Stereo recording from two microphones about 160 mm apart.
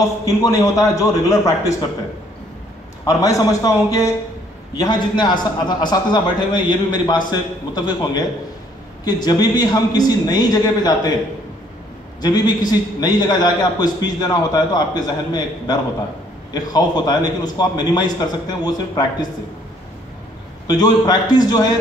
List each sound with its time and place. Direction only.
0.2 s a man's voice: 20° left (ahead or behind)
3.1 s a man's voice: 20° left (ahead or behind)
12.2 s a man's voice: 25° left (ahead or behind)
20.6 s a man's voice: 25° left (ahead or behind)